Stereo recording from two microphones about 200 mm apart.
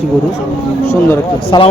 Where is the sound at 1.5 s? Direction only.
20° left (ahead or behind).